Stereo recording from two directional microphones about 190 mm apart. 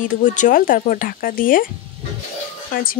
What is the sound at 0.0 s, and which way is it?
Speech, 40° left (ahead or behind).